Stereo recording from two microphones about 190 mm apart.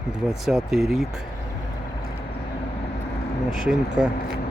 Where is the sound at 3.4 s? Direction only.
5° right (ahead or behind).